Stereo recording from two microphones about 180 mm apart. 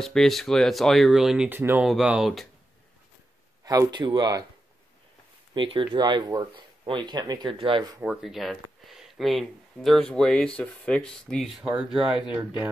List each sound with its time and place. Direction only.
0.0 s speech: centre (ahead or behind)
3.6 s speech: 20° right (ahead or behind)
5.5 s speech: 30° right (ahead or behind)
8.0 s speech: 5° right (ahead or behind)